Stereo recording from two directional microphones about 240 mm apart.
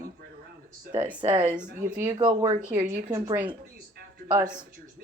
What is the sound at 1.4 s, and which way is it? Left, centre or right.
Speech, centre.